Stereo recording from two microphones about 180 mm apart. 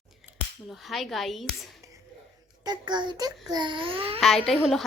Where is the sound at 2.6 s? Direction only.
25° right (ahead or behind).